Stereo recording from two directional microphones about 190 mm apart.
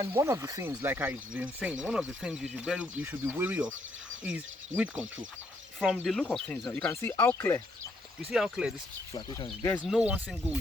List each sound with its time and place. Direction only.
0.0 s speech: 15° right (ahead or behind); by 7.6 s 15° left (ahead or behind)
8.2 s speech: centre (ahead or behind)
9.1 s speech: 20° left (ahead or behind)
9.7 s speech: centre (ahead or behind)